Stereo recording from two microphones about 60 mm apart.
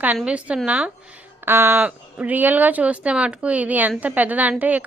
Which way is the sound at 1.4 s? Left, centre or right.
Right.